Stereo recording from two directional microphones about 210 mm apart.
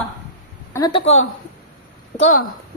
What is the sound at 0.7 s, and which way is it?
Speech, 15° left (ahead or behind).